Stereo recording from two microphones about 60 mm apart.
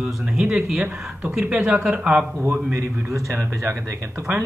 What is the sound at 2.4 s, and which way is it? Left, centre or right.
A man's voice, right.